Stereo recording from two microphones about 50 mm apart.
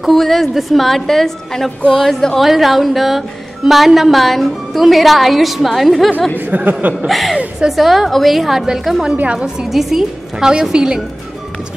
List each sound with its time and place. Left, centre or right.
0.0 s a woman's voice: centre
2.4 s a woman's voice: centre
6.3 s speech: right
7.1 s a woman's voice: centre
9.3 s a woman's voice: centre
9.7 s a woman's voice: centre